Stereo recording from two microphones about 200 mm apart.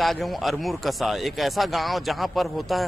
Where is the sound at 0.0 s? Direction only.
Centre (ahead or behind).